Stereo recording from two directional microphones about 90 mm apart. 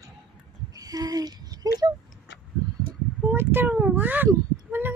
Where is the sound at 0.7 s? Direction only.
45° right (ahead or behind).